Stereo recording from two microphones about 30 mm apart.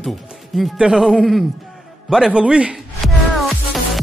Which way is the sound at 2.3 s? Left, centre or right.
Right.